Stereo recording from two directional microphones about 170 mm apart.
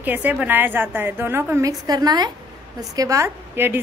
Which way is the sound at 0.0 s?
10° right (ahead or behind).